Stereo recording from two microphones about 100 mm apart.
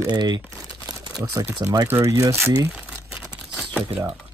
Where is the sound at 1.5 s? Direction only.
20° right (ahead or behind).